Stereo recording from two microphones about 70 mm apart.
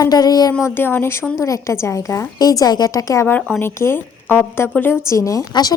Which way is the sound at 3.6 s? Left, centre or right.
Left.